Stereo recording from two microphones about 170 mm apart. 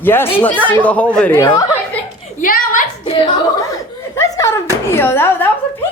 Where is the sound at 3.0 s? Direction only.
30° left (ahead or behind).